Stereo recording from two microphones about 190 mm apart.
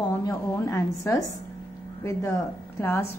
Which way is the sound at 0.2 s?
15° left (ahead or behind).